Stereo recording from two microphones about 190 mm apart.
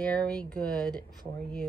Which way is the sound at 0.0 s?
5° left (ahead or behind).